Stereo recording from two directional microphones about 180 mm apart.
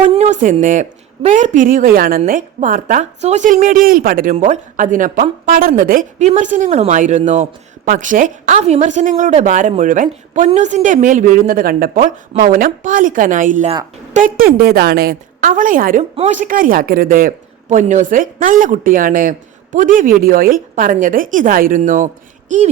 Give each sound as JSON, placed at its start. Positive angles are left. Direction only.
{"t": 0.0, "sound": "a sound", "side_deg": -35}
{"t": 0.6, "sound": "speech", "side_deg": -45}
{"t": 14.6, "sound": "speech", "side_deg": -60}